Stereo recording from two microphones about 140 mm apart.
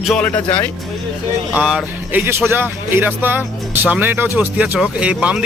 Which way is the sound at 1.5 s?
5° right (ahead or behind).